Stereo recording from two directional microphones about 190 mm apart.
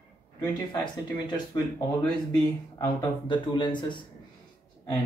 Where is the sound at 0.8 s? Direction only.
25° left (ahead or behind).